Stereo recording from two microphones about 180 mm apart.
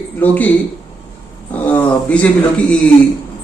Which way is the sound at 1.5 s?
10° left (ahead or behind).